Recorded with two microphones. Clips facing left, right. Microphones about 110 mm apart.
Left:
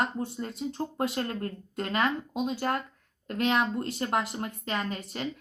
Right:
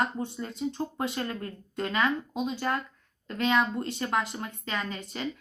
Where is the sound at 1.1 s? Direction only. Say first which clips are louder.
Left 2 dB; 40° left (ahead or behind).